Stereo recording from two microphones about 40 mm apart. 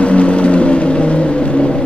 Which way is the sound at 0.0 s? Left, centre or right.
Left.